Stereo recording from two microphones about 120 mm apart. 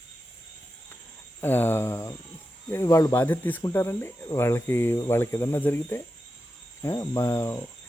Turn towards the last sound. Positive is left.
turn(degrees=20)  # may be behind; listen again after turning